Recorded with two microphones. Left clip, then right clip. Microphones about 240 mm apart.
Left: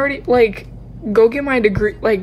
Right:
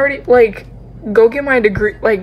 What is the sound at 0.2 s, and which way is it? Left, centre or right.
Speech, centre.